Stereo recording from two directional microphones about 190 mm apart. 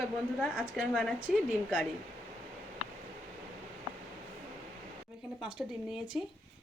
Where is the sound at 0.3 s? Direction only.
Centre (ahead or behind).